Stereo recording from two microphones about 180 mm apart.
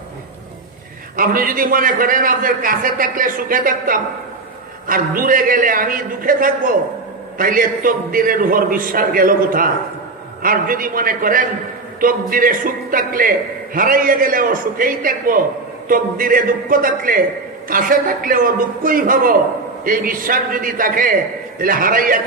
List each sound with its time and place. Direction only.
1.1 s a man's voice: 50° right (ahead or behind)